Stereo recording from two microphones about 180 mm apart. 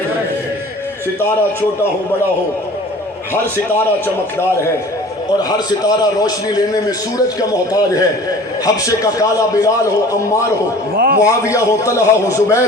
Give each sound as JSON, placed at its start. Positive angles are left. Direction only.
{"t": 5.4, "sound": "a man's voice", "side_deg": 20}
{"t": 10.9, "sound": "a man's voice", "side_deg": -55}
{"t": 11.2, "sound": "a man's voice", "side_deg": 15}